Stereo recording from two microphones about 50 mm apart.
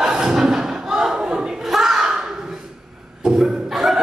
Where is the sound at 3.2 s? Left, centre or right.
Centre.